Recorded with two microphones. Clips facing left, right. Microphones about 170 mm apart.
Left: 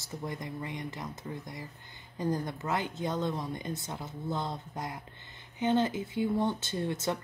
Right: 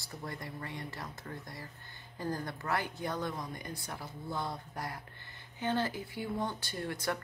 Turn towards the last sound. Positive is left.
turn(degrees=20)  # may be behind; listen again after turning